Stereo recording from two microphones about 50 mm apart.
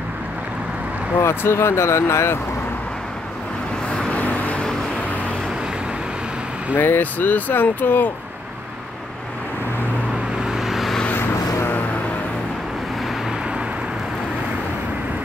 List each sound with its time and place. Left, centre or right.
1.2 s speech: left
4.1 s vehicle: left
6.8 s speech: left
10.4 s vehicle: centre